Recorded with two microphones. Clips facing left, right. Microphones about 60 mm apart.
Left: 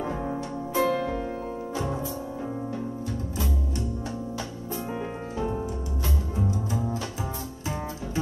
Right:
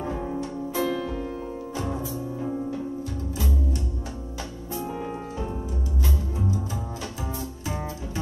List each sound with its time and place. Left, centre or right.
0.7 s music: left
1.8 s music: centre